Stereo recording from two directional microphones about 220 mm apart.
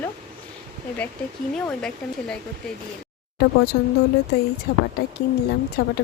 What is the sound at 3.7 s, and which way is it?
Speech, 45° left (ahead or behind).